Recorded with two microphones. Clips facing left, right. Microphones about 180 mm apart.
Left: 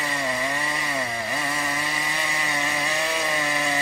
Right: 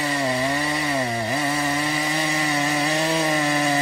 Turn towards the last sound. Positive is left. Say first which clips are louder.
# right 5 dB
turn(degrees=-35)  # may be behind; listen again after turning